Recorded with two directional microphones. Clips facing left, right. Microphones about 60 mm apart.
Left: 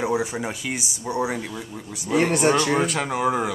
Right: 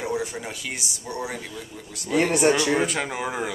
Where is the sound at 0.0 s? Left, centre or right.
Centre.